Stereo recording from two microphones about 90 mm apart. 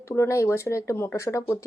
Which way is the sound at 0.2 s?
35° left (ahead or behind).